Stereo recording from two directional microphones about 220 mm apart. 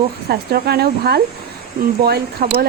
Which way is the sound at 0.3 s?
45° right (ahead or behind).